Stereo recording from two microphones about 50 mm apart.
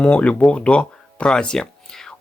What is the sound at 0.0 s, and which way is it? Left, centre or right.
Speech, left.